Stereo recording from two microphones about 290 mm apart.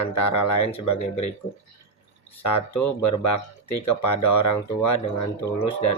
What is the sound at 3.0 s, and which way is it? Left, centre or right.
Speech, left.